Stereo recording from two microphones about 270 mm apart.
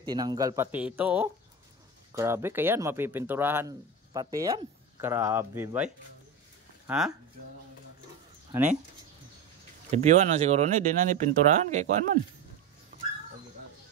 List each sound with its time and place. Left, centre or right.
0.0 s speech: centre
6.9 s speech: centre
8.5 s speech: centre
9.8 s speech: right